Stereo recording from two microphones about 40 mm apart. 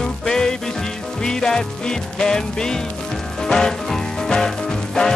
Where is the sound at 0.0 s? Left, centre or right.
Centre.